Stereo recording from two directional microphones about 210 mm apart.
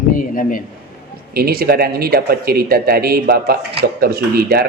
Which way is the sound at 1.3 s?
45° right (ahead or behind).